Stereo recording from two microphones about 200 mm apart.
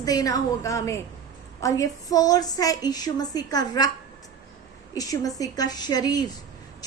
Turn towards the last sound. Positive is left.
turn(degrees=20)  # may be behind; listen again after turning